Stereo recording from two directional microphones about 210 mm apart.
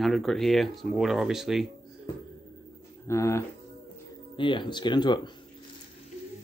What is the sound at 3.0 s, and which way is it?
Speech, 15° left (ahead or behind).